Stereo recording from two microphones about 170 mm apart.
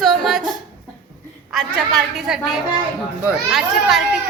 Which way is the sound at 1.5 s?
Centre (ahead or behind).